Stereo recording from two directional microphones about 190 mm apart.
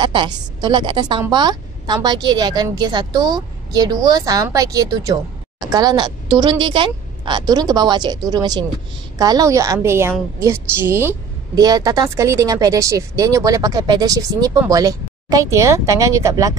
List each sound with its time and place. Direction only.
0.0 s a woman's voice: 25° right (ahead or behind)